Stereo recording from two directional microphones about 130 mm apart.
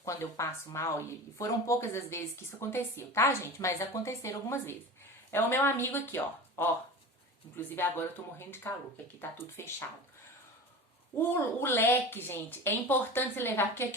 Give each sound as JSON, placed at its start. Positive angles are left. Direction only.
{"t": 0.0, "sound": "a woman's voice", "side_deg": 25}
{"t": 11.2, "sound": "a woman's voice", "side_deg": 15}